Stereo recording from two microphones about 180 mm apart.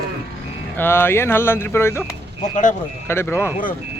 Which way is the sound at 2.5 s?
45° left (ahead or behind).